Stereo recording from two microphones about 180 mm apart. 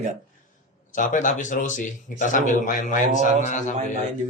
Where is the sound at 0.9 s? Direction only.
45° left (ahead or behind).